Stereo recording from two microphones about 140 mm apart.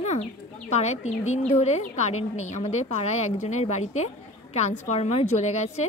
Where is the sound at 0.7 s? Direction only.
55° left (ahead or behind).